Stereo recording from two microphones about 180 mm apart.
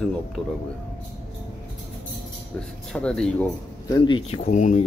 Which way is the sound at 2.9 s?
5° left (ahead or behind).